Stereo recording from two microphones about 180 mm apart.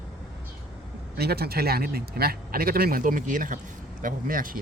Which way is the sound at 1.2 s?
60° right (ahead or behind).